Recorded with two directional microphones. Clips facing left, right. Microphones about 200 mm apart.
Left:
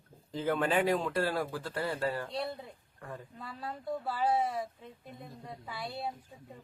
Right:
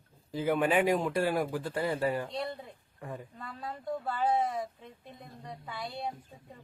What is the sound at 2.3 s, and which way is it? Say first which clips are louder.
Speech: even; 5° left (ahead or behind).